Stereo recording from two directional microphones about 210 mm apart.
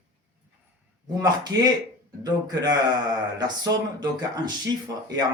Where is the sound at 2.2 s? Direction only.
20° right (ahead or behind).